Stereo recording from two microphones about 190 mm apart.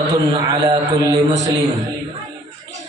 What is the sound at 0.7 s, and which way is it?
Speech, 20° right (ahead or behind).